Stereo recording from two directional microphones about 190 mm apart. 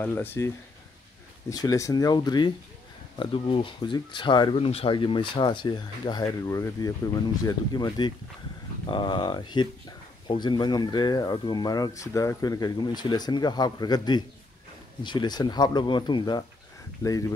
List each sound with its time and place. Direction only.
0.0 s speech: 10° left (ahead or behind)
1.5 s speech: 20° left (ahead or behind)